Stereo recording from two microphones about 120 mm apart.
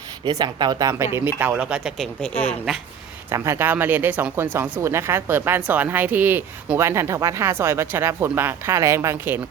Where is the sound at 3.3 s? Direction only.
20° right (ahead or behind).